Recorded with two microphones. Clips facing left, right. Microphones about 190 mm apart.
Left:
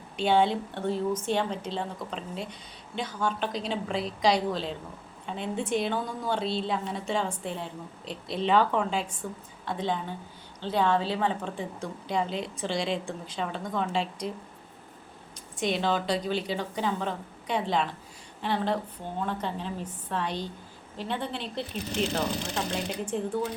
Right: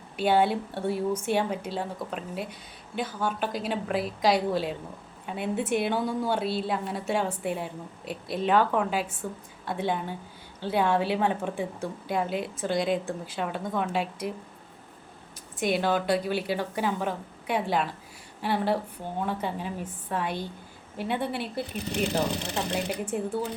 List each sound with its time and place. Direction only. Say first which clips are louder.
0.2 s a woman's voice: right 1 dB; 5° right (ahead or behind)
15.6 s a woman's voice: right 2 dB; 5° right (ahead or behind)
23.0 s a woman's voice: even; 5° right (ahead or behind)